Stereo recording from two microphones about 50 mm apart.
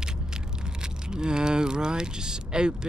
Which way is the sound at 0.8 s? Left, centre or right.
Centre.